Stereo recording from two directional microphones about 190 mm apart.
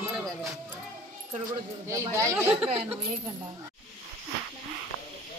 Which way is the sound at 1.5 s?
15° right (ahead or behind).